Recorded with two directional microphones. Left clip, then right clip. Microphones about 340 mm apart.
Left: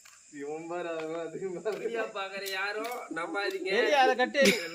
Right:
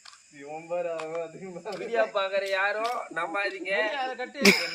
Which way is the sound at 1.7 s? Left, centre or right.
Centre.